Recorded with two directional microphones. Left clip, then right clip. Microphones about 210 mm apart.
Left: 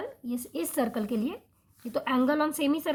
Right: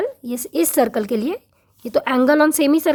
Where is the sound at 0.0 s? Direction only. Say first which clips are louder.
Right 12 dB; 50° right (ahead or behind).